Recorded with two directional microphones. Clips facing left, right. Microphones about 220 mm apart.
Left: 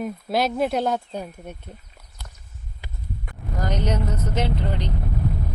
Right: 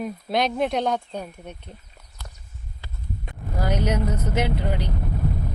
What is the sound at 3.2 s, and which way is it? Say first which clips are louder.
Vehicle: right 2 dB; 10° right (ahead or behind).